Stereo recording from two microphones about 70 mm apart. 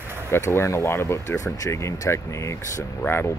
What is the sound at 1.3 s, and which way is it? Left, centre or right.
Speech, left.